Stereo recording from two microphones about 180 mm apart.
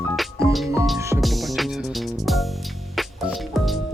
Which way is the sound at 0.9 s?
15° right (ahead or behind).